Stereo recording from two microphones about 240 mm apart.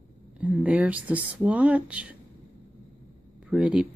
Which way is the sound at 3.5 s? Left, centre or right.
Centre.